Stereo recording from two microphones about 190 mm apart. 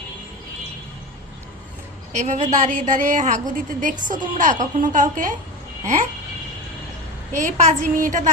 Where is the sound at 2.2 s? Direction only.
40° right (ahead or behind).